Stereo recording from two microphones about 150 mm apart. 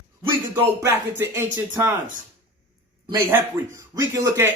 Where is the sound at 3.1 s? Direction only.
15° right (ahead or behind).